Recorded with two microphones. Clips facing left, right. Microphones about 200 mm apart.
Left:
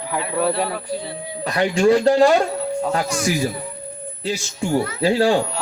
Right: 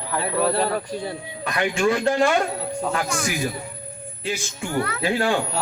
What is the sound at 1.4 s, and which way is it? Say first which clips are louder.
Speech: left 4 dB; 35° left (ahead or behind).